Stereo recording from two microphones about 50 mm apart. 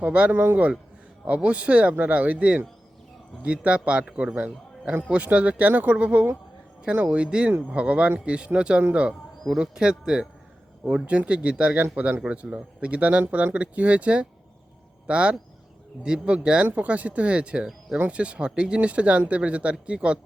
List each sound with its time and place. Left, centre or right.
0.0 s a man's voice: right